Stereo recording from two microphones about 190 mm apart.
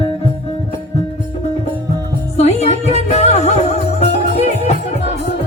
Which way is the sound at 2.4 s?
35° left (ahead or behind).